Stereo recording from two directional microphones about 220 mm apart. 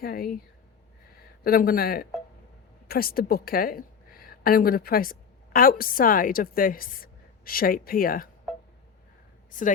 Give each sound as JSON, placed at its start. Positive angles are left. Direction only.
{"t": 0.0, "sound": "speech", "side_deg": 45}
{"t": 1.5, "sound": "a woman's voice", "side_deg": 40}
{"t": 9.5, "sound": "speech", "side_deg": 35}